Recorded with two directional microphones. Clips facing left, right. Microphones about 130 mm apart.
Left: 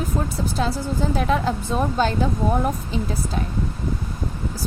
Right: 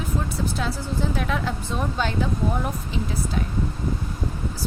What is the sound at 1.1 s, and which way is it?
Speech, 35° left (ahead or behind).